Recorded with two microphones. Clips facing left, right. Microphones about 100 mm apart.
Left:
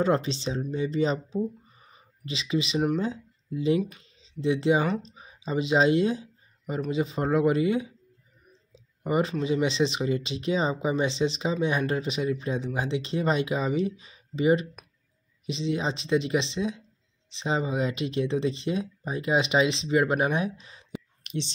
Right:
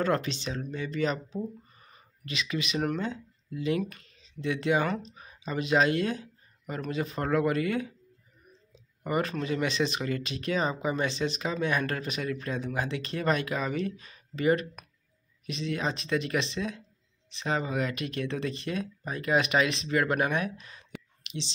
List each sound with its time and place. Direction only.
0.0 s speech: 25° left (ahead or behind)
21.2 s whispering: 45° left (ahead or behind)